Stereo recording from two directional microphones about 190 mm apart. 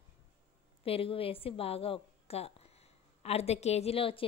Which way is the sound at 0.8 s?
30° left (ahead or behind).